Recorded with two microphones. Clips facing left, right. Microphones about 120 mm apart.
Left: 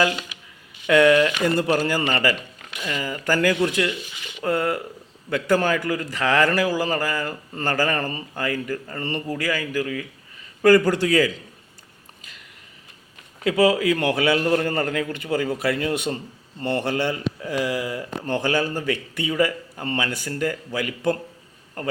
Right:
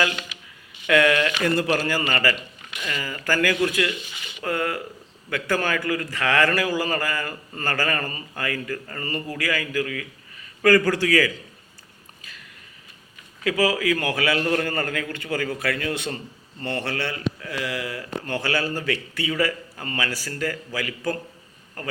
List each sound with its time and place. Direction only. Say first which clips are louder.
0.9 s a man's voice: left 4 dB; 15° left (ahead or behind)
2.8 s a man's voice: left 3 dB; 15° left (ahead or behind)
3.8 s a sound: left 2 dB; centre (ahead or behind)
5.5 s a man's voice: left 3 dB; 15° left (ahead or behind)
7.5 s a man's voice: left 3 dB; 20° left (ahead or behind)
9.5 s a man's voice: even; 10° left (ahead or behind)
10.6 s a man's voice: left 2 dB; 25° left (ahead or behind)
13.4 s a man's voice: left 4 dB; 25° left (ahead or behind)